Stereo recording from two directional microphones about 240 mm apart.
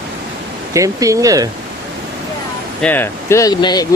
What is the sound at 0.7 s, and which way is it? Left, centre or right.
Speech, centre.